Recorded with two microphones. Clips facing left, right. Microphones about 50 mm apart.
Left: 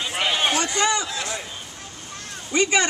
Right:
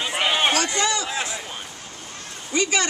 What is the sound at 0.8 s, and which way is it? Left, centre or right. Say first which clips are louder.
Speech: left 2 dB; left.